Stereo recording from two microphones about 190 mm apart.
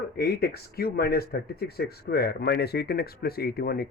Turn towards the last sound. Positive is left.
turn(degrees=55)  # may be behind; listen again after turning